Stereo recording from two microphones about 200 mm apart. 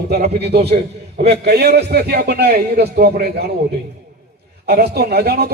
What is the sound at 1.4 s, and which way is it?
A man's voice, 55° right (ahead or behind).